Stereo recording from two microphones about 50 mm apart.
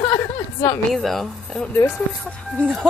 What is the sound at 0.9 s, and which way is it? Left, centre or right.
Speech, centre.